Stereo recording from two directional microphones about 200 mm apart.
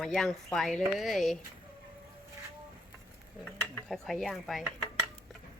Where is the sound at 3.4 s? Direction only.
5° left (ahead or behind).